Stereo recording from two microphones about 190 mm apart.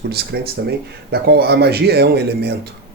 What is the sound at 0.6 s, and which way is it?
Speech, 60° right (ahead or behind).